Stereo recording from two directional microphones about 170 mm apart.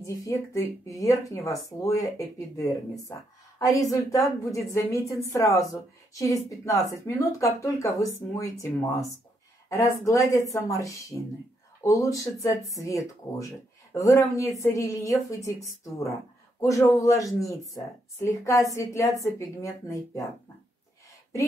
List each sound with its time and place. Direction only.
0.0 s a woman's voice: 20° left (ahead or behind)
16.6 s speech: 20° left (ahead or behind)